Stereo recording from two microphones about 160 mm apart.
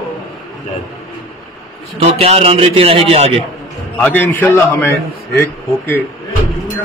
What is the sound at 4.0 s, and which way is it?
Speech, 10° left (ahead or behind).